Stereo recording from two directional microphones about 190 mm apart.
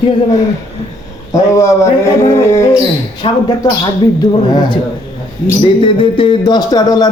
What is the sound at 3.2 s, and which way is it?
A man's voice, 25° left (ahead or behind).